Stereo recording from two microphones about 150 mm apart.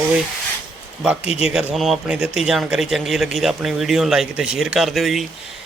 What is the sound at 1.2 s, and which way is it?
Speech, 45° left (ahead or behind).